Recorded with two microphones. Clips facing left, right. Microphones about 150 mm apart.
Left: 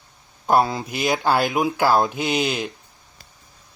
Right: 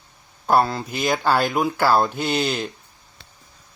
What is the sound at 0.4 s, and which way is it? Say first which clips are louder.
Speech: even; 10° left (ahead or behind).